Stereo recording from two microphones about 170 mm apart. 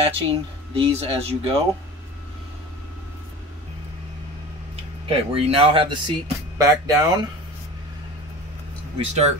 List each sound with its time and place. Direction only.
0.0 s speech: 35° right (ahead or behind)
5.0 s speech: 35° right (ahead or behind)
8.9 s speech: 40° right (ahead or behind)